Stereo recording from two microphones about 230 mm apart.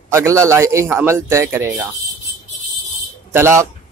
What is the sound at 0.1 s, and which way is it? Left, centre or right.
Speech, centre.